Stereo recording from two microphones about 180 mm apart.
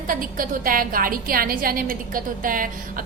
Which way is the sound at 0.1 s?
50° right (ahead or behind).